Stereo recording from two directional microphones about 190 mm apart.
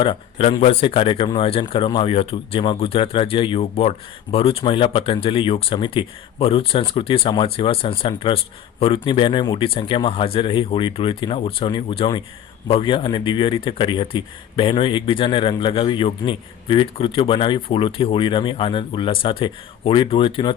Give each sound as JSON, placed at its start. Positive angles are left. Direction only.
{"t": 0.0, "sound": "speech", "side_deg": 30}